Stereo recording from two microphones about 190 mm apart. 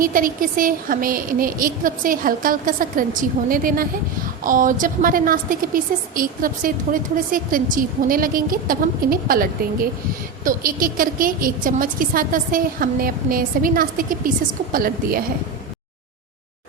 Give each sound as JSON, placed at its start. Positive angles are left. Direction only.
{"t": 0.0, "sound": "a woman's voice", "side_deg": -45}